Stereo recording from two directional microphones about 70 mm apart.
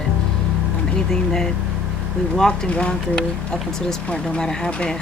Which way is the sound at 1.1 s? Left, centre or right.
Centre.